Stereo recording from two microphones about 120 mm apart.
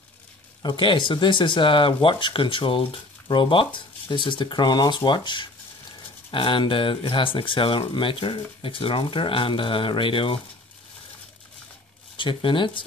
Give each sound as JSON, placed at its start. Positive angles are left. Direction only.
{"t": 0.6, "sound": "speech", "side_deg": 40}
{"t": 12.2, "sound": "speech", "side_deg": 45}